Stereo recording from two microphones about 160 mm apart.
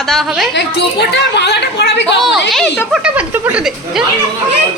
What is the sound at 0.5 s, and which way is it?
A woman's voice, 90° left.